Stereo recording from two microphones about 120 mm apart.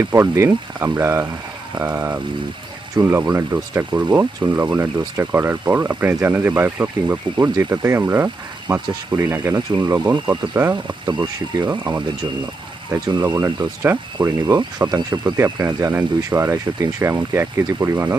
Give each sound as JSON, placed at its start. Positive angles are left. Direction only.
{"t": 0.0, "sound": "speech", "side_deg": -25}
{"t": 7.5, "sound": "speech", "side_deg": -30}
{"t": 9.6, "sound": "speech", "side_deg": -35}
{"t": 10.5, "sound": "speech", "side_deg": -15}
{"t": 11.0, "sound": "speech", "side_deg": -40}
{"t": 12.9, "sound": "speech", "side_deg": -25}
{"t": 14.5, "sound": "speech", "side_deg": -35}